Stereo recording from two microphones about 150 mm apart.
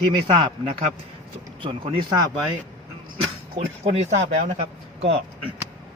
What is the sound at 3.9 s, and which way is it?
Speech, 50° right (ahead or behind).